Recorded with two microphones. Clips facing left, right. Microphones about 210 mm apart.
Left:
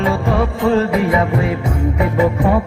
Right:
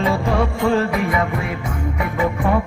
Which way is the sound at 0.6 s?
20° left (ahead or behind).